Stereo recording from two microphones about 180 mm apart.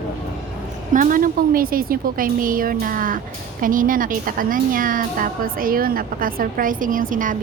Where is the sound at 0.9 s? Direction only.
50° right (ahead or behind).